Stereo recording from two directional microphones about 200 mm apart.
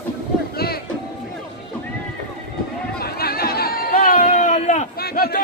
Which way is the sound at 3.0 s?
50° left (ahead or behind).